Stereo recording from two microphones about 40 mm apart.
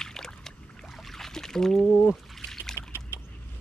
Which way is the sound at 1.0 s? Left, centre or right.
Centre.